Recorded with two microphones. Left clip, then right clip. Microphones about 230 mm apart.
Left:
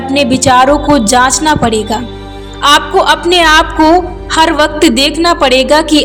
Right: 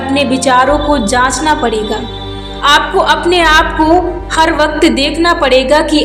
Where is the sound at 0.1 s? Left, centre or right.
Left.